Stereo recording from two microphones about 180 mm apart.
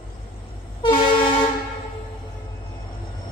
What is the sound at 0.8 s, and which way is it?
Vehicle, 30° left (ahead or behind).